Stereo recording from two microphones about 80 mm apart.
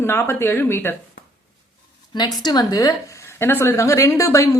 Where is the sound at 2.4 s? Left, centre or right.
Left.